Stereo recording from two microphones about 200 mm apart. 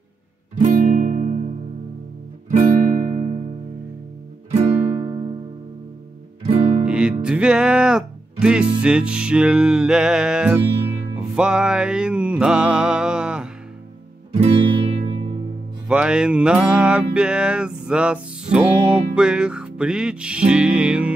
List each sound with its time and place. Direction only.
0.6 s music: 40° right (ahead or behind)
4.5 s music: 30° right (ahead or behind)
6.4 s music: 30° right (ahead or behind)
6.9 s music: 5° right (ahead or behind)
14.3 s music: 30° right (ahead or behind)
15.9 s music: 5° right (ahead or behind)